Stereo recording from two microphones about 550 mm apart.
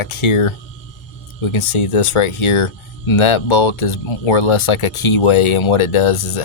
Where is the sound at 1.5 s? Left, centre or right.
Left.